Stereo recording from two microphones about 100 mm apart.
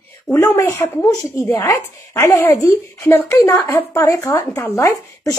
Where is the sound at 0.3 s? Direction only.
25° left (ahead or behind).